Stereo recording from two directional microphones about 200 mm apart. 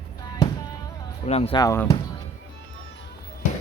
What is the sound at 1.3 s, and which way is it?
Speech, 30° left (ahead or behind).